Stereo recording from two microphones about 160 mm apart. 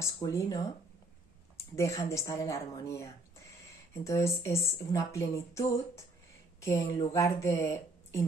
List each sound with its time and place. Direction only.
0.0 s a woman's voice: 20° left (ahead or behind)
1.8 s a woman's voice: 20° left (ahead or behind)